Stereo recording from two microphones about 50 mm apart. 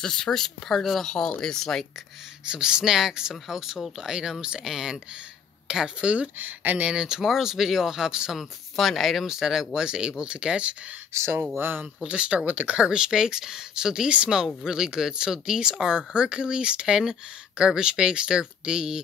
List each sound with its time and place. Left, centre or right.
0.0 s speech: centre
2.4 s speech: centre
6.3 s speech: right
7.0 s speech: centre
8.4 s speech: centre; by 10.8 s right
11.5 s speech: right
12.1 s speech: right
12.4 s speech: right
12.7 s speech: centre